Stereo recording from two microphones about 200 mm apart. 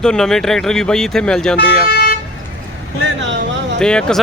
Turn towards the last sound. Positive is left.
turn(degrees=5)  # may be behind; listen again after turning